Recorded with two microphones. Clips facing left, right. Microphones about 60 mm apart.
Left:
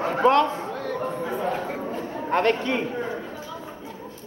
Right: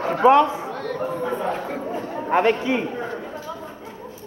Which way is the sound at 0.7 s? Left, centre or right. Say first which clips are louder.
Right 2 dB; centre.